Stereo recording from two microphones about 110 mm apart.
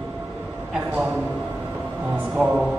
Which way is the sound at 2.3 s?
10° right (ahead or behind).